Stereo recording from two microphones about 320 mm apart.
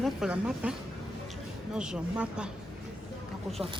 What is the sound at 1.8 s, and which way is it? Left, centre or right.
Speech, centre.